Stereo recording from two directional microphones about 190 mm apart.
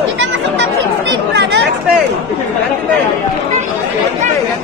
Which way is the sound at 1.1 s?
65° right (ahead or behind).